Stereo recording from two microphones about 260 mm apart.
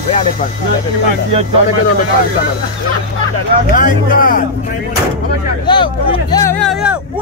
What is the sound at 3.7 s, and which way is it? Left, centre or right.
Speech, left.